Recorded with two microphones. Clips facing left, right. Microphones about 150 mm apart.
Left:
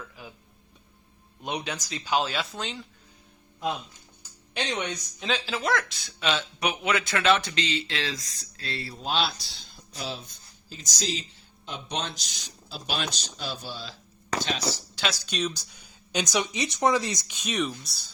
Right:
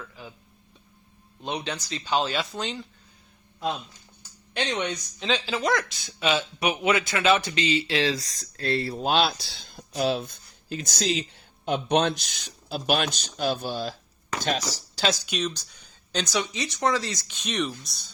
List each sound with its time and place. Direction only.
0.2 s a sound: 10° left (ahead or behind)
1.4 s speech: 10° left (ahead or behind)
4.5 s speech: 5° left (ahead or behind)
8.0 s speech: 35° right (ahead or behind)
8.5 s speech: 50° right (ahead or behind)
14.3 s a sound: 45° right (ahead or behind)
14.7 s speech: 35° right (ahead or behind)
15.3 s speech: centre (ahead or behind)